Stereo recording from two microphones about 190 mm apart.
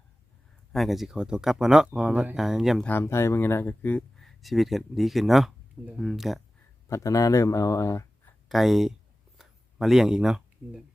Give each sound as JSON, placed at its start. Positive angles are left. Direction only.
{"t": 0.7, "sound": "speech", "side_deg": 0}
{"t": 6.8, "sound": "speech", "side_deg": 15}
{"t": 8.4, "sound": "speech", "side_deg": 0}
{"t": 9.4, "sound": "a sound", "side_deg": 0}